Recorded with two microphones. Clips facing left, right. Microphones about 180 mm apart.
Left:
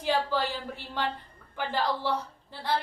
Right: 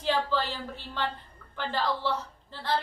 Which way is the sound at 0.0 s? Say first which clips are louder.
Even; 10° left (ahead or behind).